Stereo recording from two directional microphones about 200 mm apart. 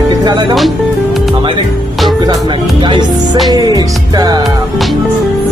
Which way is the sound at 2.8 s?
25° right (ahead or behind).